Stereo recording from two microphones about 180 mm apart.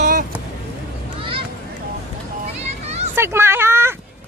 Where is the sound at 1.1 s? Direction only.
30° right (ahead or behind).